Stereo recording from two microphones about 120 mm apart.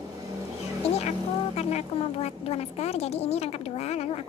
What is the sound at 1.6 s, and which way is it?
A woman's voice, 65° left (ahead or behind).